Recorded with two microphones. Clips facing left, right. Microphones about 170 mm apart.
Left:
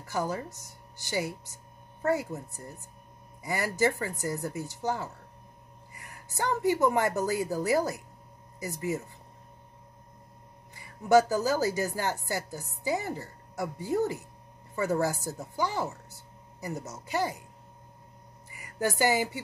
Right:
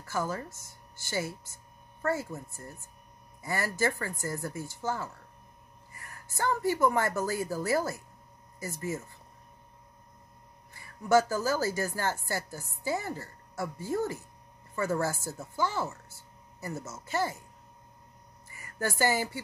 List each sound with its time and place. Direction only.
0.0 s speech: 15° left (ahead or behind)
10.7 s speech: 15° left (ahead or behind)
18.5 s speech: 15° left (ahead or behind)